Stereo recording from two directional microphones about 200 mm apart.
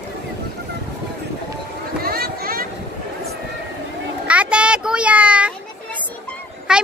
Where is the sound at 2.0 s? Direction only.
50° right (ahead or behind).